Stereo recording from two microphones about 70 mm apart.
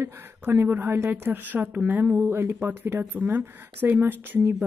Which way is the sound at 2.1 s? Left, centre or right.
Right.